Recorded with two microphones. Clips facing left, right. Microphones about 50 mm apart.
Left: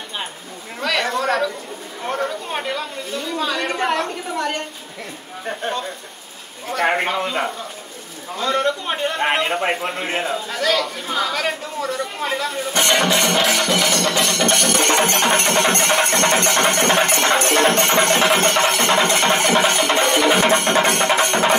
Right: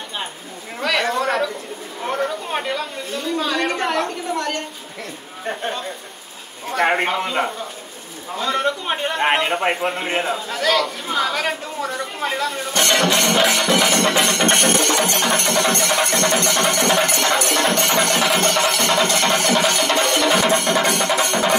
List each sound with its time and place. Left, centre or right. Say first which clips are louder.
0.7 s chatter: right 1 dB; centre
2.0 s speech: right 1 dB; centre
6.7 s a man's voice: right 1 dB; centre
12.7 s speech: even; centre
13.8 s music: right 2 dB; right
14.8 s music: left 2 dB; left
20.3 s music: left 1 dB; left